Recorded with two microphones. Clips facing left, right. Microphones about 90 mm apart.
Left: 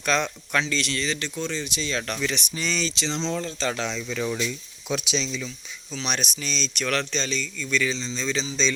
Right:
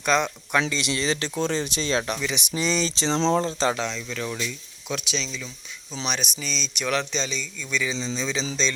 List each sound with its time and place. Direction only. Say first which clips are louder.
0.0 s speech: right 2 dB; 10° right (ahead or behind)
1.0 s speech: right 4 dB; 30° right (ahead or behind)
2.0 s speech: even; 10° right (ahead or behind)
2.9 s speech: right 6 dB; 35° right (ahead or behind)
3.8 s speech: left 1 dB; 5° left (ahead or behind)
6.1 s speech: even; 5° right (ahead or behind)